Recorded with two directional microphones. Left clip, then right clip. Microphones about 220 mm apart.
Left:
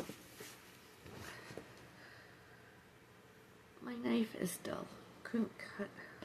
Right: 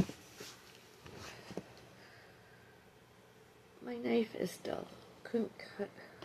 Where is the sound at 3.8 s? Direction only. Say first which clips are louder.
Right 4 dB; 20° left (ahead or behind).